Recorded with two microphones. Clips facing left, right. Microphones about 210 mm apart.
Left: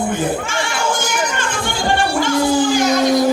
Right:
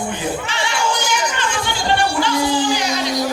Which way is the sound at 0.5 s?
50° left (ahead or behind).